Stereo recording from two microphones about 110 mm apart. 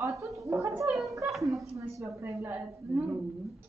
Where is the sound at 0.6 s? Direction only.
30° right (ahead or behind).